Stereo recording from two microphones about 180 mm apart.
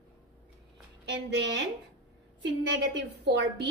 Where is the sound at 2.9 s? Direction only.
70° right (ahead or behind).